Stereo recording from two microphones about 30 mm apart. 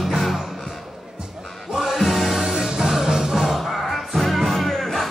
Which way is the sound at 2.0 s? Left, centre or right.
Centre.